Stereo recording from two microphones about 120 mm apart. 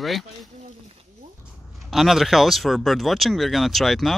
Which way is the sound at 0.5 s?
70° right (ahead or behind).